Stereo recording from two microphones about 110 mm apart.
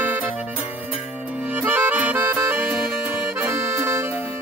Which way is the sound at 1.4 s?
15° right (ahead or behind).